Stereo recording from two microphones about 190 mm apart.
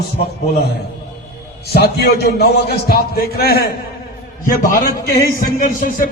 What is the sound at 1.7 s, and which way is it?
A man's voice, 55° left (ahead or behind).